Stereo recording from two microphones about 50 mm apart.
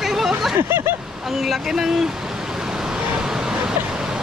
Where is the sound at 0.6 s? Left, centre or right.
Right.